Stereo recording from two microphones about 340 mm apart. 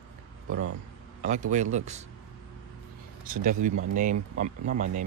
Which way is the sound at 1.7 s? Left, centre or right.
Centre.